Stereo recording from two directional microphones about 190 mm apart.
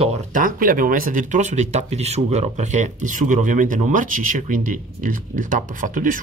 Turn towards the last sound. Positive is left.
turn(degrees=-45)  # may be behind; listen again after turning